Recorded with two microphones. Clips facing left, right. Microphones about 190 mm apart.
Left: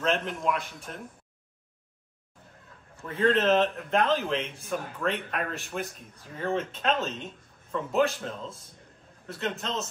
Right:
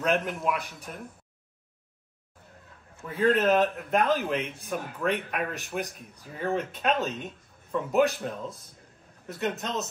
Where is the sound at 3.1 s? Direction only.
5° right (ahead or behind).